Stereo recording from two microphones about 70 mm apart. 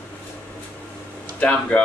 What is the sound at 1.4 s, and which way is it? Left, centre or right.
Speech, centre.